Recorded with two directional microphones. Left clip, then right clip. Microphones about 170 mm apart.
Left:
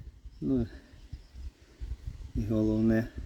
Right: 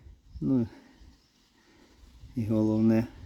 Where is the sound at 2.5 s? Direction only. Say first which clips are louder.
Right 2 dB; 50° right (ahead or behind).